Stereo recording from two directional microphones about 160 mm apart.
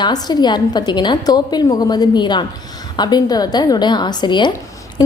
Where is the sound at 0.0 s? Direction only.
25° left (ahead or behind).